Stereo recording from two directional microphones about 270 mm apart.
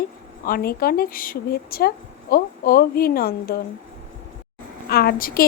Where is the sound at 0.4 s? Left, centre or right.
Left.